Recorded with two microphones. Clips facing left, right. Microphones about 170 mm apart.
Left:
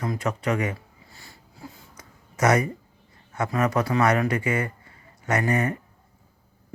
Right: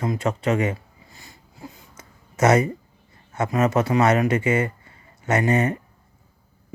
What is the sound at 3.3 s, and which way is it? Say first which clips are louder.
Speech: right 3 dB; 20° right (ahead or behind).